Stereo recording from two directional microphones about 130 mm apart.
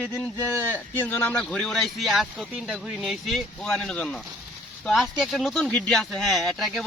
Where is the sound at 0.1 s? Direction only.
20° left (ahead or behind).